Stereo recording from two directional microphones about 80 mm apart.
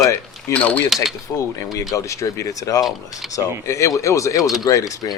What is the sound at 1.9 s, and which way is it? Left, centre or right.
Speech, left.